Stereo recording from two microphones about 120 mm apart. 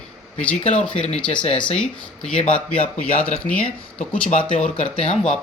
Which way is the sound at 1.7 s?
10° left (ahead or behind).